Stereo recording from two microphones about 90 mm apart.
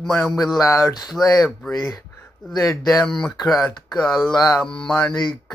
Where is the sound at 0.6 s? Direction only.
35° left (ahead or behind).